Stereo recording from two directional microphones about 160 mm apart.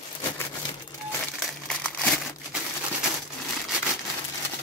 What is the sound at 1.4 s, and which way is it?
Crumpling, 5° left (ahead or behind).